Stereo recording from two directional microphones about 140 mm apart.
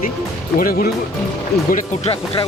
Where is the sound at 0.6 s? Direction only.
90° left.